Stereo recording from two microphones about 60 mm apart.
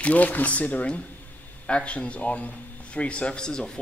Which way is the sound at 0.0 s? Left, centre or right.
Left.